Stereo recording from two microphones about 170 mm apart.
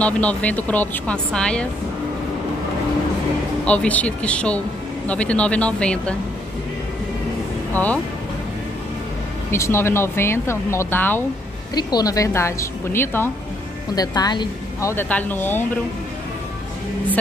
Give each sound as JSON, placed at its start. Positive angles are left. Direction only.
{"t": 0.0, "sound": "speech", "side_deg": 10}
{"t": 3.6, "sound": "speech", "side_deg": 10}
{"t": 7.7, "sound": "speech", "side_deg": 10}
{"t": 9.5, "sound": "speech", "side_deg": 15}
{"t": 11.7, "sound": "speech", "side_deg": 20}